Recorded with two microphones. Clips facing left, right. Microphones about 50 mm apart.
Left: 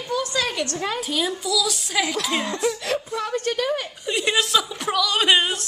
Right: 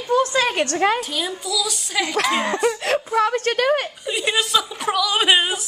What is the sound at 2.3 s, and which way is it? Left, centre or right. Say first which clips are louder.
Speech: right 4 dB; right.